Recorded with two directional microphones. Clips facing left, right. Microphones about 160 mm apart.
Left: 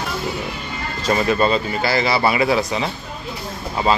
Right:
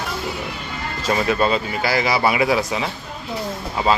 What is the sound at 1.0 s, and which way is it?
A man's voice, 5° right (ahead or behind).